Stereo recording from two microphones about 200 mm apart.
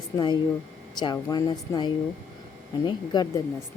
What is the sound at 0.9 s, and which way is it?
Speech, 20° left (ahead or behind).